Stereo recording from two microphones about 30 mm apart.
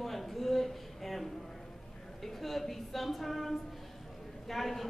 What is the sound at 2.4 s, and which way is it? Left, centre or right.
A man's voice, centre.